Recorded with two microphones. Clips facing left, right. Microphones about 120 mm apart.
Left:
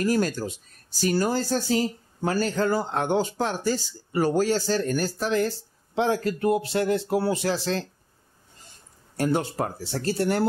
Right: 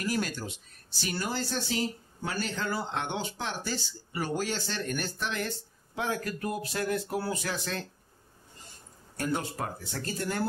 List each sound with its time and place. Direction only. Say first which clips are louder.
0.0 s speech: left 8 dB; 40° left (ahead or behind)
9.1 s speech: left 7 dB; 30° left (ahead or behind)